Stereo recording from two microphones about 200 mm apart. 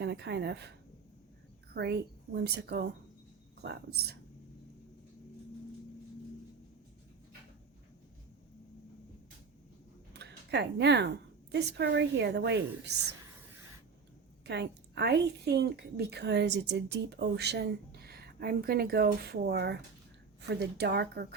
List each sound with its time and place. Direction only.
0.0 s a woman's voice: 55° right (ahead or behind)
1.7 s a woman's voice: 55° right (ahead or behind)
10.2 s a sound: 55° right (ahead or behind)
11.5 s a woman's voice: 60° right (ahead or behind)
14.4 s a woman's voice: 55° right (ahead or behind)